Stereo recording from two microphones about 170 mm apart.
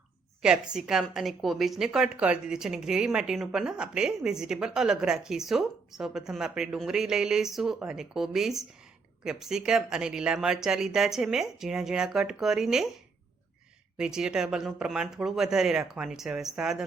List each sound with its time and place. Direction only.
0.4 s a woman's voice: 5° right (ahead or behind)
14.0 s a woman's voice: 5° right (ahead or behind)